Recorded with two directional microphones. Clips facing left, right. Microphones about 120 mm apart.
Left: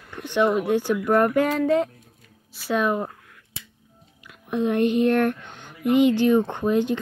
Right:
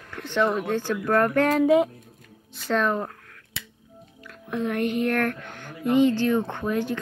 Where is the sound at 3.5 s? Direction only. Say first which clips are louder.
Right 4 dB; 70° right (ahead or behind).